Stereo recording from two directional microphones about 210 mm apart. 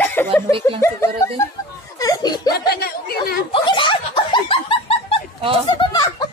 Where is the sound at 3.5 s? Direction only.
25° left (ahead or behind).